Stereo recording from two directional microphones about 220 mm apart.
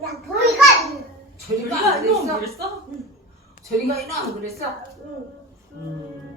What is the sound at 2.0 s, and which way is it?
Speech, 15° right (ahead or behind).